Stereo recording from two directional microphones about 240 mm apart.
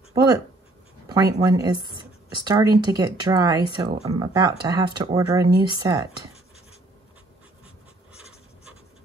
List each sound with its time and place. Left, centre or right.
0.1 s speech: centre